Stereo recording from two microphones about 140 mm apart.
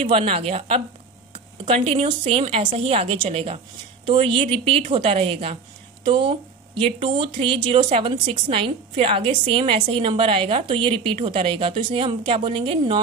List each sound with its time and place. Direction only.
0.1 s a woman's voice: 45° right (ahead or behind)